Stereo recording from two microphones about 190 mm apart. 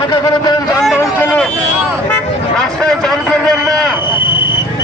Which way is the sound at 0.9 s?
10° left (ahead or behind).